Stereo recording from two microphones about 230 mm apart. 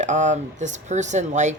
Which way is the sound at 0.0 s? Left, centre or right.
Right.